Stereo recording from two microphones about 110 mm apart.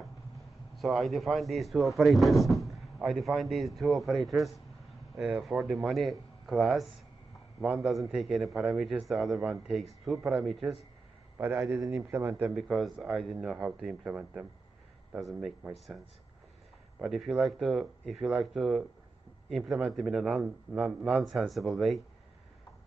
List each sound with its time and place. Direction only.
0.7 s a man's voice: centre (ahead or behind)
11.3 s a man's voice: 20° right (ahead or behind)
12.5 s speech: centre (ahead or behind)
17.0 s speech: 5° right (ahead or behind)